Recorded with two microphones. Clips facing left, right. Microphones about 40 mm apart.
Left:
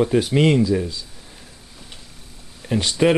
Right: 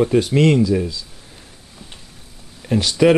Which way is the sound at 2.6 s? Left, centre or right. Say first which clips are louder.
Right 3 dB; centre.